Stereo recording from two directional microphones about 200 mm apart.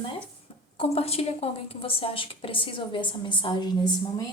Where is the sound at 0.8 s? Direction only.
30° left (ahead or behind).